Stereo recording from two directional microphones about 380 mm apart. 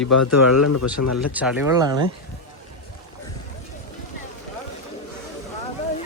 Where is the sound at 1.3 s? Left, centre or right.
Centre.